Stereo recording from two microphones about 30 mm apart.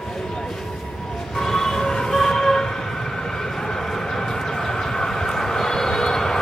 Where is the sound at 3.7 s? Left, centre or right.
Centre.